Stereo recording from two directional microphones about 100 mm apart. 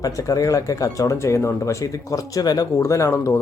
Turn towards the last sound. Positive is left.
turn(degrees=30)  # may be behind; listen again after turning